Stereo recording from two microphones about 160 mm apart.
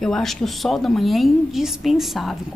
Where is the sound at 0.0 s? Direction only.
Centre (ahead or behind).